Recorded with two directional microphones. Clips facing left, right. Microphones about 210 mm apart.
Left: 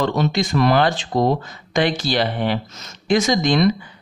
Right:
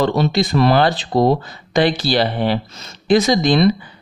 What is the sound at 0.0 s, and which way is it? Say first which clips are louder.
Speech: right 3 dB; 35° right (ahead or behind).